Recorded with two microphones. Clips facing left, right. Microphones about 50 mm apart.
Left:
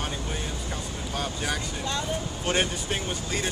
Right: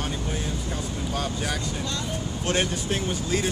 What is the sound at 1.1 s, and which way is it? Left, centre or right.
Speech, centre.